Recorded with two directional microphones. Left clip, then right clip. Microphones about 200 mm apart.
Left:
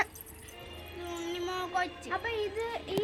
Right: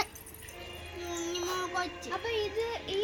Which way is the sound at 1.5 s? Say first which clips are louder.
Left 3 dB; 30° left (ahead or behind).